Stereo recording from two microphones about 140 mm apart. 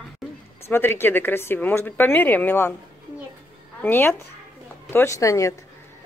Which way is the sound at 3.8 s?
15° left (ahead or behind).